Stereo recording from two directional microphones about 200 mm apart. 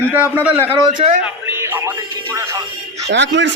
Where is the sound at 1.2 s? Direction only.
10° right (ahead or behind).